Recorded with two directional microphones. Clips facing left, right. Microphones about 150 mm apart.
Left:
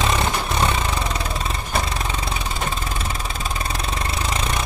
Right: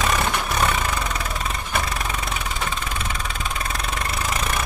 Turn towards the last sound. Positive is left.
turn(degrees=25)  # may be behind; listen again after turning